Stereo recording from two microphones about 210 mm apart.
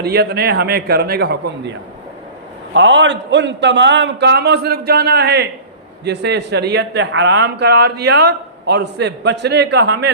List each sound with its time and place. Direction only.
0.0 s speech: 50° right (ahead or behind)
2.7 s speech: 60° right (ahead or behind)